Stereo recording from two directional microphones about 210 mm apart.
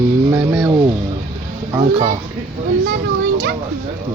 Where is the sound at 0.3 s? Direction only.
10° right (ahead or behind).